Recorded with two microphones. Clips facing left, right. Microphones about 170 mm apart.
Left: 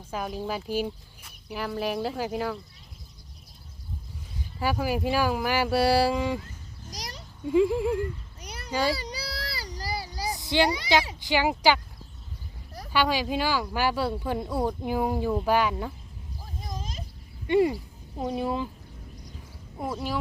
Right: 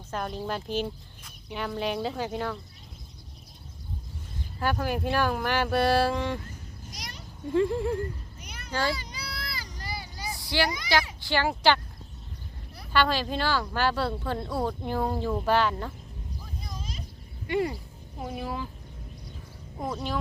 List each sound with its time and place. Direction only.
0.1 s speech: 5° left (ahead or behind)
4.6 s speech: 5° left (ahead or behind)
6.9 s a sound: 35° left (ahead or behind)
7.4 s speech: 10° left (ahead or behind)
8.4 s children playing: 35° left (ahead or behind)
9.0 s a sound: 35° left (ahead or behind)
10.3 s a sound: 20° left (ahead or behind)
10.7 s a child's voice: 30° left (ahead or behind)
11.2 s speech: 15° left (ahead or behind)
12.9 s speech: 10° left (ahead or behind)
16.4 s a sound: 45° left (ahead or behind)
18.2 s speech: 20° left (ahead or behind)
19.8 s speech: 5° left (ahead or behind)